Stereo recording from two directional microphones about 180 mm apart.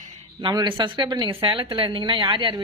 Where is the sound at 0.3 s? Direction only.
25° right (ahead or behind).